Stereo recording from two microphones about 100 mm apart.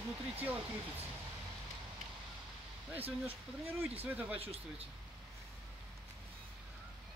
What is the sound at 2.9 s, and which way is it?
Speech, 20° right (ahead or behind).